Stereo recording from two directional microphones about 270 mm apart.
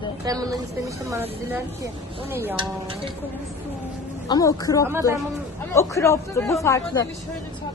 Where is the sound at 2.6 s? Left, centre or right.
Centre.